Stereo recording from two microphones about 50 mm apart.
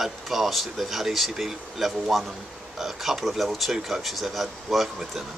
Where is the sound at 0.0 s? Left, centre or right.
Centre.